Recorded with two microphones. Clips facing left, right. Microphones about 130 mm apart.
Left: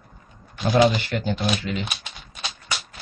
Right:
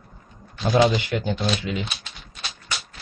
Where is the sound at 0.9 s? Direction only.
20° right (ahead or behind).